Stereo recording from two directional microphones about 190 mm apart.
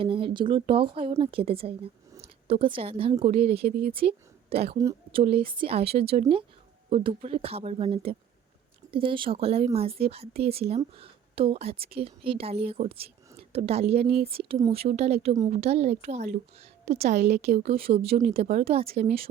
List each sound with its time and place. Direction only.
0.0 s a woman's voice: 30° right (ahead or behind)
3.7 s speech: 50° right (ahead or behind)
3.9 s speech: 30° right (ahead or behind)
4.8 s a woman's voice: 15° right (ahead or behind)
5.2 s a woman's voice: 30° right (ahead or behind)